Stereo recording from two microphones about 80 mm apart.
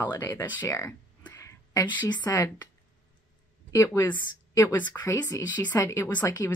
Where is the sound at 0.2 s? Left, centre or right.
Left.